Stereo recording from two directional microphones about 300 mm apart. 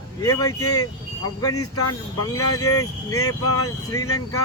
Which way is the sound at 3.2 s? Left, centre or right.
Left.